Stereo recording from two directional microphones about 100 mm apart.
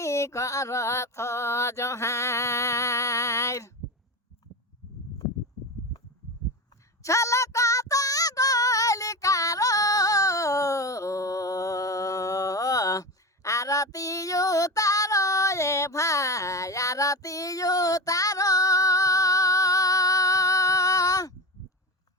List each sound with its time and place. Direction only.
0.0 s mantra: 30° left (ahead or behind)
7.0 s female singing: 30° left (ahead or behind)